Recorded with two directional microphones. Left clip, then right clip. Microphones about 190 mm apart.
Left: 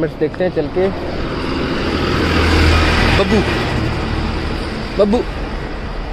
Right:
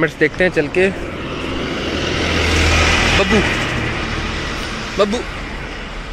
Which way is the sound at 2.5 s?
40° left (ahead or behind).